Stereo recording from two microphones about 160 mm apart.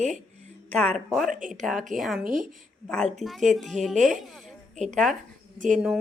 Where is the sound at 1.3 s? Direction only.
55° right (ahead or behind).